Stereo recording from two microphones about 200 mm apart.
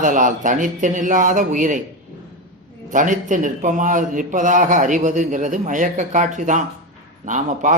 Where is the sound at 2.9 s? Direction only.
40° right (ahead or behind).